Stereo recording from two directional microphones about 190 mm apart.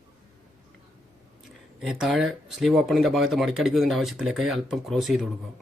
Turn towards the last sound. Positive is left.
turn(degrees=0)  # may be behind; listen again after turning